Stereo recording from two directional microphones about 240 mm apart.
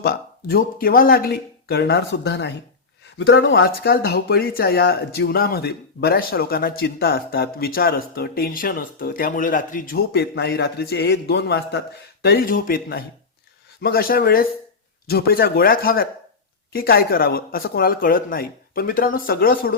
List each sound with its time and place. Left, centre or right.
0.0 s speech: left